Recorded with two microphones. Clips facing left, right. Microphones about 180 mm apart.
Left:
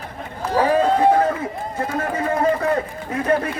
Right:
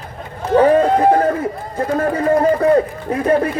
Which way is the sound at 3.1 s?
35° right (ahead or behind).